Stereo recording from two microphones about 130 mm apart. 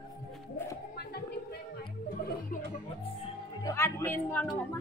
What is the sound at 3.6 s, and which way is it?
Music, 20° left (ahead or behind).